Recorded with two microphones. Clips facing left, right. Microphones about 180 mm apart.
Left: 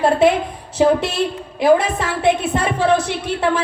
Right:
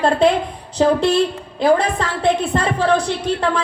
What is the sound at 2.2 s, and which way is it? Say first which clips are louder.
Speech: even; 15° left (ahead or behind).